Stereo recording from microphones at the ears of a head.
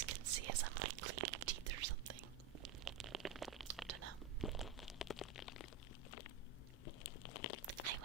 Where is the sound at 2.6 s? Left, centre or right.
Right.